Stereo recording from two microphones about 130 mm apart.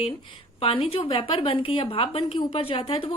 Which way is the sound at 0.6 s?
45° left (ahead or behind).